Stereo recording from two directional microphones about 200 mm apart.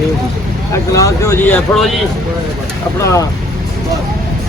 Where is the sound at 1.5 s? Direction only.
5° left (ahead or behind).